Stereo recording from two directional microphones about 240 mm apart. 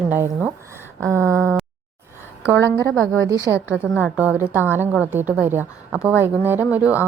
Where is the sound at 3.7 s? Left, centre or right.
Centre.